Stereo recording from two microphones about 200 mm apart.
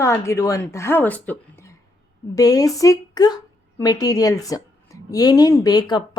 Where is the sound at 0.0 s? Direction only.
15° left (ahead or behind).